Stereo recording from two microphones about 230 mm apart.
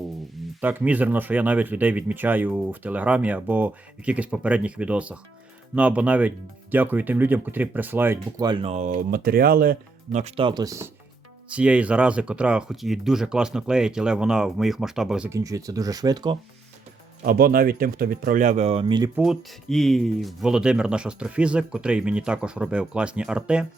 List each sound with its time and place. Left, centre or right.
0.6 s speech: centre
17.2 s speech: right; by 19.1 s centre
19.1 s speech: centre